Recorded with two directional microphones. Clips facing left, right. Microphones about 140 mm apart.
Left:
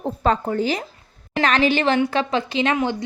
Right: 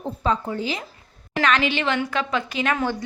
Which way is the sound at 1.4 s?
35° left (ahead or behind).